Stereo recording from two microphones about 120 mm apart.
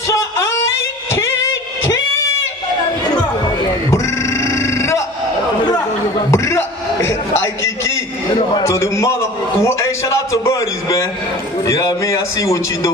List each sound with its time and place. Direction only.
3.9 s sheep: 25° left (ahead or behind)
6.3 s a sound: 25° left (ahead or behind)
11.6 s a man's voice: 25° left (ahead or behind)